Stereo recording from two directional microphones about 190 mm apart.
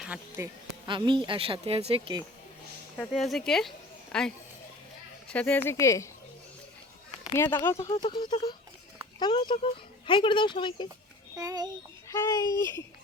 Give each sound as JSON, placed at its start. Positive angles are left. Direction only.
{"t": 0.0, "sound": "speech", "side_deg": -10}
{"t": 0.9, "sound": "a woman's voice", "side_deg": -25}
{"t": 3.0, "sound": "speech", "side_deg": 0}
{"t": 5.3, "sound": "speech", "side_deg": 5}
{"t": 7.3, "sound": "speech", "side_deg": 10}
{"t": 11.3, "sound": "a woman's voice", "side_deg": -20}
{"t": 12.1, "sound": "speech", "side_deg": 15}